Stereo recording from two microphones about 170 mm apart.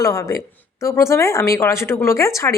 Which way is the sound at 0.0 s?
20° left (ahead or behind).